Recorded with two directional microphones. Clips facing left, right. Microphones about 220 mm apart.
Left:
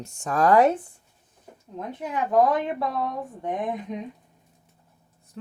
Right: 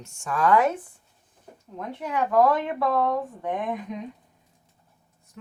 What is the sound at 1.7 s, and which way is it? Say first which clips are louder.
Speech: right 1 dB; 20° left (ahead or behind).